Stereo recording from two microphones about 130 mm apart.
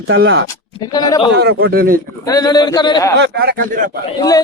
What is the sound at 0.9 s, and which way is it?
Speech, 30° left (ahead or behind).